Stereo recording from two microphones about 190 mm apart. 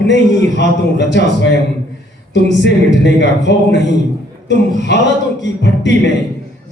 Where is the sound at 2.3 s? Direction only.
65° left (ahead or behind).